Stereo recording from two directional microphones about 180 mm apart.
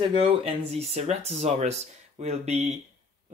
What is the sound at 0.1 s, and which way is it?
Speech, 30° right (ahead or behind).